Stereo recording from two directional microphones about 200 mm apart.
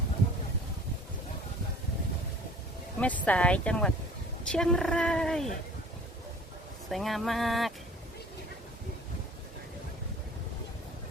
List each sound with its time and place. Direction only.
3.0 s speech: 5° left (ahead or behind)
6.9 s speech: centre (ahead or behind)